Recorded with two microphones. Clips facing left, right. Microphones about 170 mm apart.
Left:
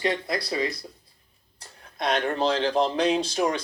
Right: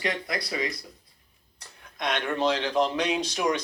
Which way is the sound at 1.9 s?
35° left (ahead or behind).